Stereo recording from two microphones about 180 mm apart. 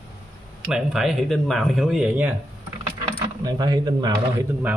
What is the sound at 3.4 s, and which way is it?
Speech, 20° right (ahead or behind).